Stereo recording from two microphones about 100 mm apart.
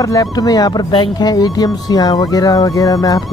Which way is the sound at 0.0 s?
40° left (ahead or behind).